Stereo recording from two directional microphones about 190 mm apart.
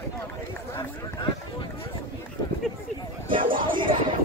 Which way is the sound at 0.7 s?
25° left (ahead or behind).